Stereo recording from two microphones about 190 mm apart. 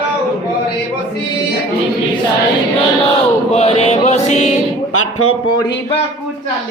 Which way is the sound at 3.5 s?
35° left (ahead or behind).